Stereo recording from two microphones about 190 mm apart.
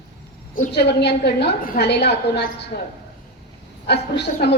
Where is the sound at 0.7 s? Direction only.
60° left (ahead or behind).